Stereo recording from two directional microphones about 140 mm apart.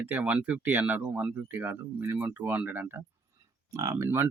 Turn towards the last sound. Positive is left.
turn(degrees=-20)  # may be behind; listen again after turning